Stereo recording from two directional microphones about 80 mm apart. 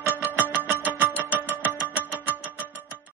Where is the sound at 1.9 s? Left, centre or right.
Right.